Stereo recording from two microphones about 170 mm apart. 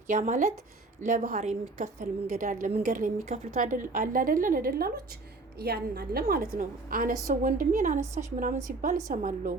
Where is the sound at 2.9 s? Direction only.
50° right (ahead or behind).